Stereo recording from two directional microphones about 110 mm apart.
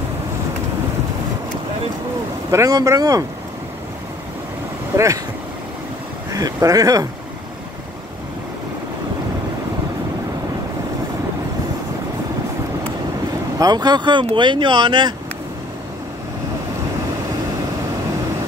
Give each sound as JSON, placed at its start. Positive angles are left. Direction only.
{"t": 2.5, "sound": "speech", "side_deg": -30}
{"t": 4.9, "sound": "speech", "side_deg": -30}
{"t": 6.3, "sound": "speech", "side_deg": -35}
{"t": 13.6, "sound": "speech", "side_deg": -40}